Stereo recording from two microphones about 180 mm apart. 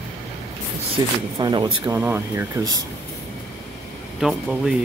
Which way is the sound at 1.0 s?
20° right (ahead or behind).